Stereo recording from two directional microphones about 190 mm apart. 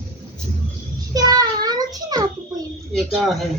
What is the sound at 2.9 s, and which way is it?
Speech, centre (ahead or behind).